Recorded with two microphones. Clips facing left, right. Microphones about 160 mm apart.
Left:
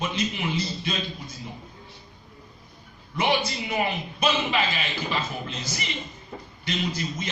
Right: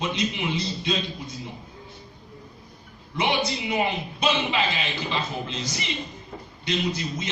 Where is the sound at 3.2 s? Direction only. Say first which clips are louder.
Even; 20° right (ahead or behind).